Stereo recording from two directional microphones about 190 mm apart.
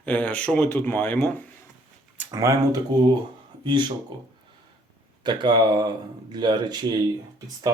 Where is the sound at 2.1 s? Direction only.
20° right (ahead or behind).